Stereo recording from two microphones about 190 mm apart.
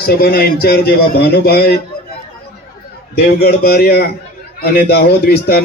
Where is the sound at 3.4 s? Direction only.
55° left (ahead or behind).